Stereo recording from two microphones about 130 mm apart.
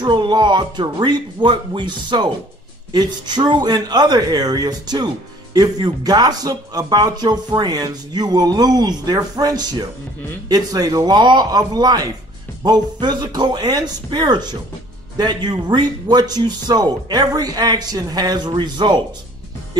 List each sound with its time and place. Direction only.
0.0 s a man's voice: 35° right (ahead or behind)